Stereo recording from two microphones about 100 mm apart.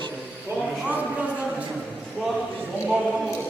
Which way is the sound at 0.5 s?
10° right (ahead or behind).